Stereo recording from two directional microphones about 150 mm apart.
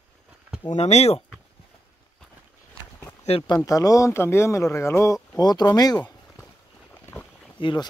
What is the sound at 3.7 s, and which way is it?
Speech, 20° left (ahead or behind).